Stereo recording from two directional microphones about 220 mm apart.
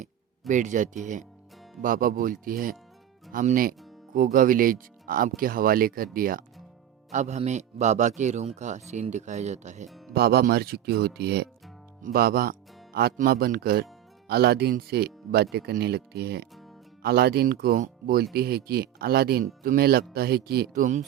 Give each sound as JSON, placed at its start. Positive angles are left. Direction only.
{"t": 0.0, "sound": "a sound", "side_deg": -35}
{"t": 1.0, "sound": "speech", "side_deg": -35}
{"t": 10.2, "sound": "speech", "side_deg": -45}